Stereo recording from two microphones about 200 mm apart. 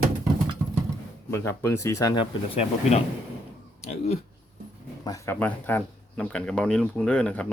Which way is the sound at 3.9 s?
30° left (ahead or behind).